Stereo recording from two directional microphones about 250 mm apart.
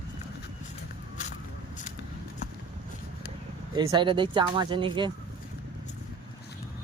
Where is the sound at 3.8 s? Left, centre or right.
Centre.